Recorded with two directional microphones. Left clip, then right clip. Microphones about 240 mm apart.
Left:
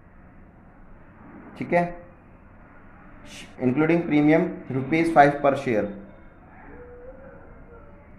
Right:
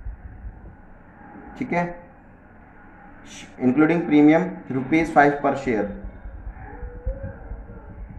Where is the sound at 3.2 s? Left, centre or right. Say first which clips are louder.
Right 3 dB; left.